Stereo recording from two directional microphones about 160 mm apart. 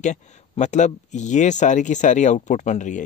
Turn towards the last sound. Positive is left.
turn(degrees=50)  # may be behind; listen again after turning